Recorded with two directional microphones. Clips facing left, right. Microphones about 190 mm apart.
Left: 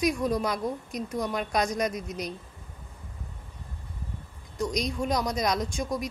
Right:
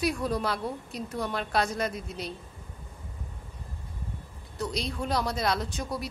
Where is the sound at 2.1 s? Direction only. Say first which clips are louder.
Left 2 dB; 30° right (ahead or behind).